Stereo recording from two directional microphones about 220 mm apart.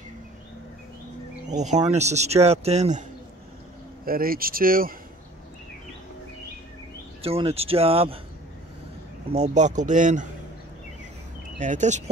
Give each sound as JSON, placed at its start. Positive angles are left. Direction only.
{"t": 1.5, "sound": "speech", "side_deg": -30}
{"t": 4.0, "sound": "speech", "side_deg": -40}
{"t": 7.2, "sound": "speech", "side_deg": -25}
{"t": 9.3, "sound": "speech", "side_deg": -30}
{"t": 11.5, "sound": "speech", "side_deg": -35}